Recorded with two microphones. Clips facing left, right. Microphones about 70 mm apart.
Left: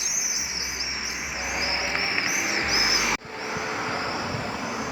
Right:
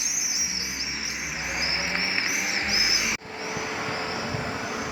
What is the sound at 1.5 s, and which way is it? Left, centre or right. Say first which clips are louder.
Music: left 2 dB; centre.